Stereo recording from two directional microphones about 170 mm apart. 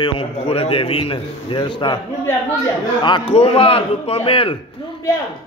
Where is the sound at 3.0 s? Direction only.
30° left (ahead or behind).